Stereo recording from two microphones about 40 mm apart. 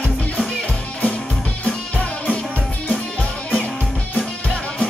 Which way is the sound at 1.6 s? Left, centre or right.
Left.